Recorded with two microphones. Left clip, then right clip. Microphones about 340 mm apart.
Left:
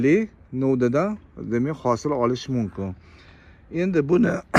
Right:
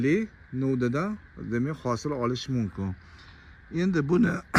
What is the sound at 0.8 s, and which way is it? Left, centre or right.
Speech, centre.